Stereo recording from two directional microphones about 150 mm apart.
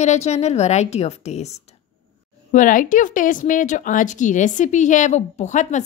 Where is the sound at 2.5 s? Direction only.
60° left (ahead or behind).